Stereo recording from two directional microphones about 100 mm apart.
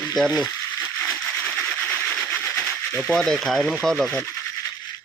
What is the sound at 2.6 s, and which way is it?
Speech, 5° left (ahead or behind).